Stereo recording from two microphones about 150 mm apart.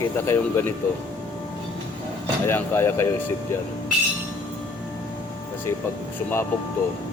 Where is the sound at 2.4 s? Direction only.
15° left (ahead or behind).